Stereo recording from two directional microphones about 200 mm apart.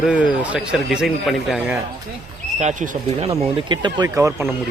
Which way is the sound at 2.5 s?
35° right (ahead or behind).